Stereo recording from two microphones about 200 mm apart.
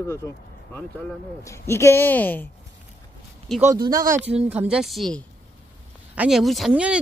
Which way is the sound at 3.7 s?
20° right (ahead or behind).